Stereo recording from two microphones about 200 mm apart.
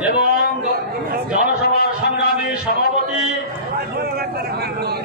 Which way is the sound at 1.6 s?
50° left (ahead or behind).